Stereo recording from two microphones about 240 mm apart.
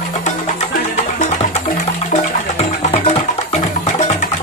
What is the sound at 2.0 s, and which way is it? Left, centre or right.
Music, left.